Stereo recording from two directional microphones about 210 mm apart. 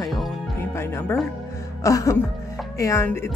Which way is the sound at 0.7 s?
10° left (ahead or behind).